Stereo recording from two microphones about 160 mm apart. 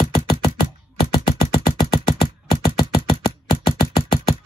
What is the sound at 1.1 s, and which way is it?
Music, 30° left (ahead or behind).